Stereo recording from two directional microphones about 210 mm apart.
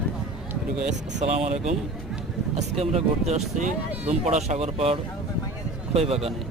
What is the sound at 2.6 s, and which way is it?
Speech, 30° right (ahead or behind).